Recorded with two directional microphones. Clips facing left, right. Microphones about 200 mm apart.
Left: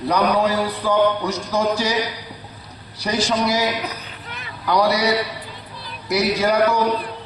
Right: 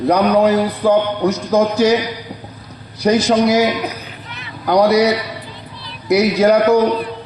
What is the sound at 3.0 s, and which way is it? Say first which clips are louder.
A man's voice: right 8 dB; 45° right (ahead or behind).